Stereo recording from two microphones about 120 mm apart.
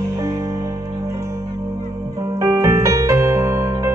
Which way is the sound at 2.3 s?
25° right (ahead or behind).